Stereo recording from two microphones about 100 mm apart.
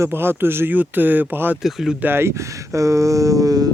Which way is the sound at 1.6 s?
Centre (ahead or behind).